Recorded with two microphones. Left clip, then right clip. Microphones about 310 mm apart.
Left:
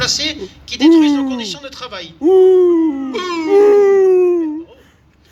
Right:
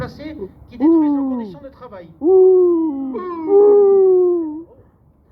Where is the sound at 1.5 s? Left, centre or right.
Left.